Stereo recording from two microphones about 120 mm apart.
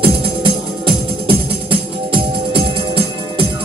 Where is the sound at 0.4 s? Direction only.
50° right (ahead or behind).